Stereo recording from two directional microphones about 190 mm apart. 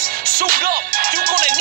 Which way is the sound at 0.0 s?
50° right (ahead or behind).